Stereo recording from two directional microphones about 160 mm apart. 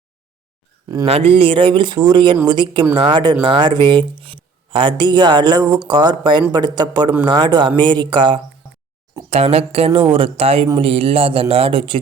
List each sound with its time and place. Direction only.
1.0 s speech: 40° right (ahead or behind)